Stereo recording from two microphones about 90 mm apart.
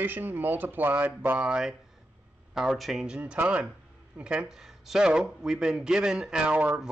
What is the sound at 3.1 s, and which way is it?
Speech, 10° right (ahead or behind).